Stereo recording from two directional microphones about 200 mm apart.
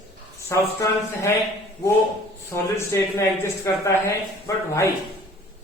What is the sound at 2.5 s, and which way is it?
A woman's voice, 15° left (ahead or behind).